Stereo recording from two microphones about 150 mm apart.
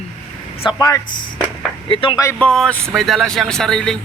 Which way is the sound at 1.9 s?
35° left (ahead or behind).